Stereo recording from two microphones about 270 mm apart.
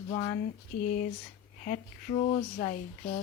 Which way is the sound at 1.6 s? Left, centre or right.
Left.